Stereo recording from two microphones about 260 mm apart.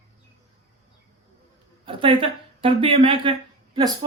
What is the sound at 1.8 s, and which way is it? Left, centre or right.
Speech, centre.